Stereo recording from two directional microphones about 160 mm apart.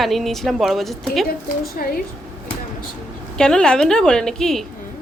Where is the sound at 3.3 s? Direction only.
5° left (ahead or behind).